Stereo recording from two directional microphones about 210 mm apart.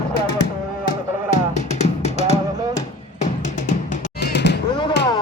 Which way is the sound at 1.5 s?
30° left (ahead or behind).